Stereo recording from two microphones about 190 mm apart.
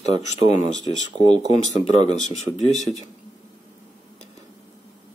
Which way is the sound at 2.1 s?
35° left (ahead or behind).